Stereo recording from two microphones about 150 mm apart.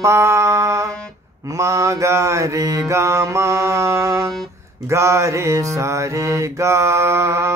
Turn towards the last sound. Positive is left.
turn(degrees=-20)  # may be behind; listen again after turning